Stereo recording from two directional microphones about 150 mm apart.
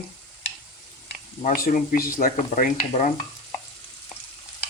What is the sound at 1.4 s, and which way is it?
Speech, 65° left (ahead or behind).